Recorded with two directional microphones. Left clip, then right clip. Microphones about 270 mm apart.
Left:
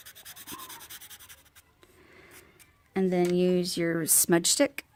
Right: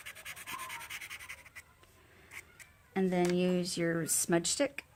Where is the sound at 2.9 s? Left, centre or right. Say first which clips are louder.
Left 5 dB; left.